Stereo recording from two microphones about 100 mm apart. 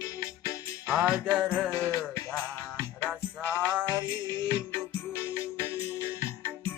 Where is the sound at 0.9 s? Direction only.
10° right (ahead or behind).